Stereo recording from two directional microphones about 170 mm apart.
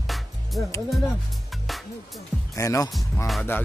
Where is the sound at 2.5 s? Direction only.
20° left (ahead or behind).